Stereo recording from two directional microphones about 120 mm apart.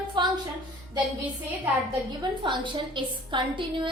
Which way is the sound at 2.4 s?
40° right (ahead or behind).